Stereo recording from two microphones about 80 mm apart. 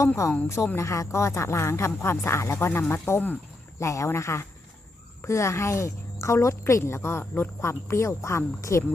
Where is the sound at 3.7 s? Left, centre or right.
Left.